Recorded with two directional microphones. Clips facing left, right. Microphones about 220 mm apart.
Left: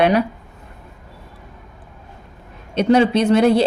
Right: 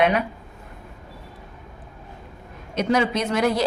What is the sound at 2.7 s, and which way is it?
Speech, 30° left (ahead or behind).